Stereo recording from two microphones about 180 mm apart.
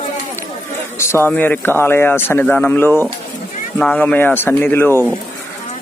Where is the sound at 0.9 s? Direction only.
15° left (ahead or behind).